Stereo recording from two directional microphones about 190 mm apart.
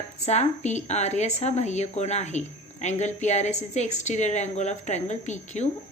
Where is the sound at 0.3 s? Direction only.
35° left (ahead or behind).